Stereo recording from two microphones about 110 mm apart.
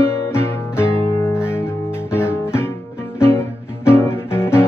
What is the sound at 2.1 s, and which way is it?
Guitar, 20° left (ahead or behind).